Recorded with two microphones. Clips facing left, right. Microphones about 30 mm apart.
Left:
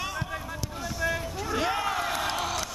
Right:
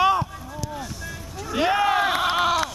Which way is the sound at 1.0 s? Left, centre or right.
Centre.